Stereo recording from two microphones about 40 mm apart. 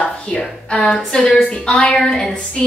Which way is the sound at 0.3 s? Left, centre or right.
Left.